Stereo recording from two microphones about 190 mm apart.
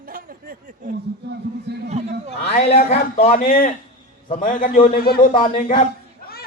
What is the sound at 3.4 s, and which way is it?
A man's voice, 50° left (ahead or behind).